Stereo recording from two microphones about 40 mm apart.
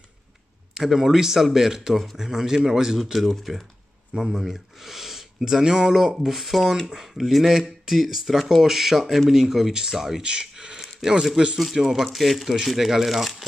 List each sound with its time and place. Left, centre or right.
0.7 s speech: centre
3.0 s speech: centre
4.1 s speech: centre
10.2 s speech: right; by 13.5 s centre